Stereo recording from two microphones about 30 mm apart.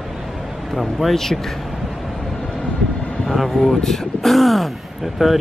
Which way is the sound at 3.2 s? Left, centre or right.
Centre.